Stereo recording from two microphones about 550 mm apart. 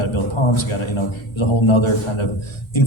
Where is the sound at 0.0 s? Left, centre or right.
Left.